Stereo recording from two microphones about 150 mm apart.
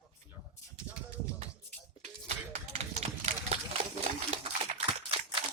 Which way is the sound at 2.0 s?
45° right (ahead or behind).